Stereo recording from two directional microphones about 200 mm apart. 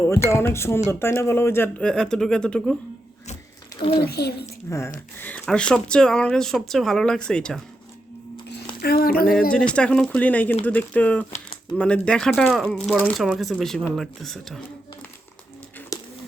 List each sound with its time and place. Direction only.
0.0 s speech: 15° left (ahead or behind)
3.9 s a woman's voice: 50° left (ahead or behind)
4.7 s speech: 15° left (ahead or behind)
8.8 s a woman's voice: 50° left (ahead or behind)
9.7 s speech: 5° left (ahead or behind)